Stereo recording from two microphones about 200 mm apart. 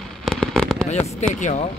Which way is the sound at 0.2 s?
Centre (ahead or behind).